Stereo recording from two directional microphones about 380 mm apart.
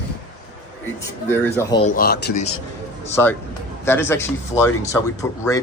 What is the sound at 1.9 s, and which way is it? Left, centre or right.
Speech, left.